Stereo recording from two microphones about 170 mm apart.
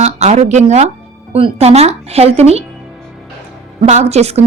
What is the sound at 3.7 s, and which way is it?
Speech, 45° right (ahead or behind).